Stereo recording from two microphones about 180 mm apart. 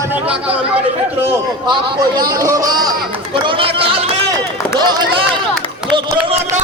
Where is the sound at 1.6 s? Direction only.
20° right (ahead or behind).